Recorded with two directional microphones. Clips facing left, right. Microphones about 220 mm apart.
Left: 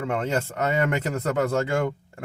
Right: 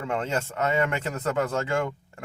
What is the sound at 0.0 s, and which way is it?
Speech, 40° left (ahead or behind).